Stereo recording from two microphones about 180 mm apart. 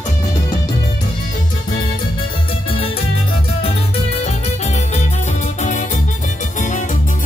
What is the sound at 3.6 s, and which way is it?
Music, 35° left (ahead or behind).